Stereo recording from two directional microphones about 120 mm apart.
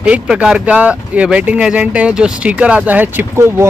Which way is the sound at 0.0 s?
10° right (ahead or behind).